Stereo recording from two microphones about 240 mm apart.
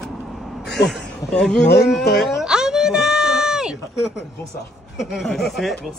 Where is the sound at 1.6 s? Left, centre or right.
Left.